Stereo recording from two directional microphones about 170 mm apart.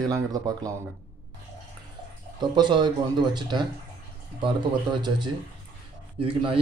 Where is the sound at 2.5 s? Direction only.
25° right (ahead or behind).